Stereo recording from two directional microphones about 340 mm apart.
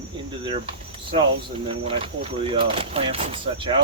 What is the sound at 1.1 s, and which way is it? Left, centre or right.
Speech, centre.